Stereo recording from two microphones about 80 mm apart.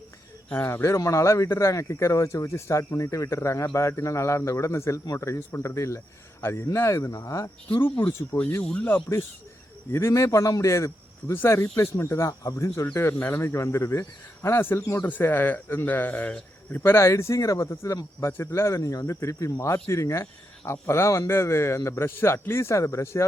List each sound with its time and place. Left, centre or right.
0.5 s speech: left
7.8 s speech: left
8.6 s speech: centre
9.9 s speech: left
15.0 s speech: left